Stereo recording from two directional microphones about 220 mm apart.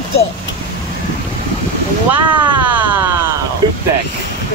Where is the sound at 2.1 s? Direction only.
5° right (ahead or behind).